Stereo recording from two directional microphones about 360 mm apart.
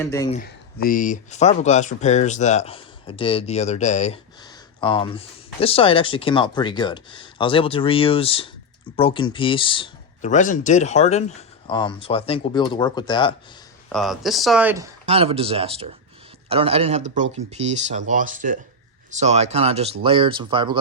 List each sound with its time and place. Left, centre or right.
0.0 s speech: centre
0.3 s speech: left
13.9 s speech: centre
15.0 s speech: centre